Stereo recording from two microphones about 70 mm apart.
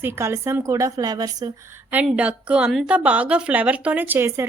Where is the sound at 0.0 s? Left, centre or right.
Right.